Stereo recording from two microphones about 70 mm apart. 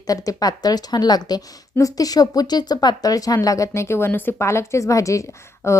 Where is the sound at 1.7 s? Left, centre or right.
Left.